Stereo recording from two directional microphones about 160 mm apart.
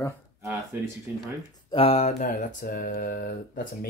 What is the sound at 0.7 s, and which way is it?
Speech, 10° right (ahead or behind).